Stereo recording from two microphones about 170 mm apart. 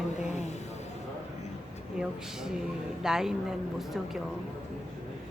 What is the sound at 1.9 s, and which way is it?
Speech, 5° right (ahead or behind).